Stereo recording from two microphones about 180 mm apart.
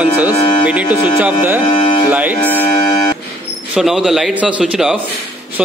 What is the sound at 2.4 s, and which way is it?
Speech, 10° left (ahead or behind).